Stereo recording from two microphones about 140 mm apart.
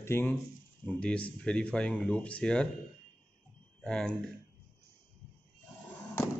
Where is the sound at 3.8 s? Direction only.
5° left (ahead or behind).